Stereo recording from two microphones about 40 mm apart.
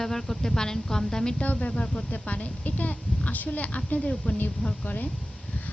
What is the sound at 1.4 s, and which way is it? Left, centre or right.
A child's voice, left.